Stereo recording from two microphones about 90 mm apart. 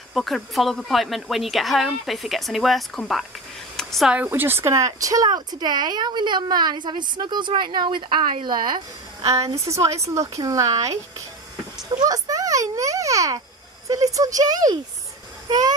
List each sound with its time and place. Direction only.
0.1 s a woman's voice: centre (ahead or behind)
3.7 s a sound: centre (ahead or behind)
4.3 s speech: 25° right (ahead or behind); by 8.8 s 55° right (ahead or behind)
9.2 s a woman's voice: 35° right (ahead or behind)
11.9 s a sound: 45° right (ahead or behind)
13.8 s speech: 40° right (ahead or behind)